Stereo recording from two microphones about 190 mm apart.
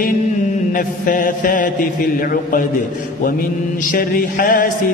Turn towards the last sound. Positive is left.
turn(degrees=45)  # may be behind; listen again after turning